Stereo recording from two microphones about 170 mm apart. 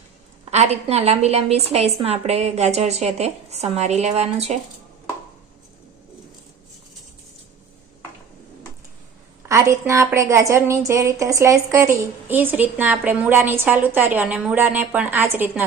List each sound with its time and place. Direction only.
0.5 s a woman's voice: 40° right (ahead or behind)
9.5 s a woman's voice: 15° right (ahead or behind)